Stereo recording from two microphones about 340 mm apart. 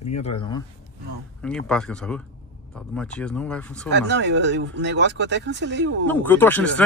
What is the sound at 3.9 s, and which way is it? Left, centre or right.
Speech, right.